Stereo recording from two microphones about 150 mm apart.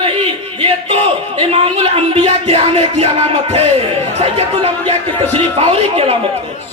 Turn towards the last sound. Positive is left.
turn(degrees=-40)  # may be behind; listen again after turning